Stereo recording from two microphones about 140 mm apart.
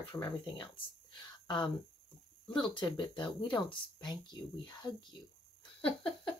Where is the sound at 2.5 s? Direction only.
35° left (ahead or behind).